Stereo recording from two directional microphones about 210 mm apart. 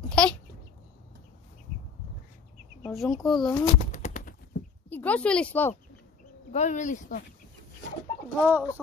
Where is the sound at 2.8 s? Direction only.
Centre (ahead or behind).